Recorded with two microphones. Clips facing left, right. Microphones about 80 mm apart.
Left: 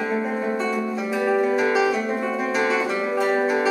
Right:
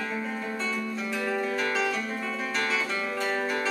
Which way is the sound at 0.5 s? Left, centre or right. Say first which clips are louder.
Left 7 dB; centre.